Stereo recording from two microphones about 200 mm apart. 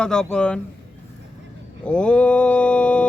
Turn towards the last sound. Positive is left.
turn(degrees=5)  # may be behind; listen again after turning